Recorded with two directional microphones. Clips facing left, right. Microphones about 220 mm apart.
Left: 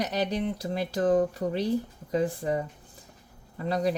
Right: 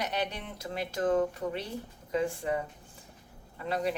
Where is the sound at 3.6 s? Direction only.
35° left (ahead or behind).